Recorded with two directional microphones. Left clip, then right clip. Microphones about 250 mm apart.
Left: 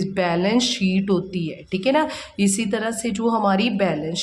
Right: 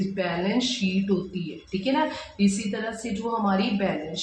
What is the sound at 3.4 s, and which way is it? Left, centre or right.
Speech, left.